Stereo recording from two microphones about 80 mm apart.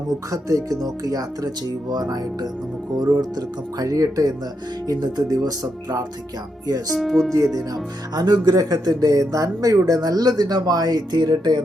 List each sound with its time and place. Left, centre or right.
0.3 s speech: right
6.9 s speech: centre
7.5 s speech: right